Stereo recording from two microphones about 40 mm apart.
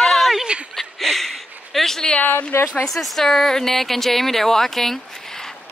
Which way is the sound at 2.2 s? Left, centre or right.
Left.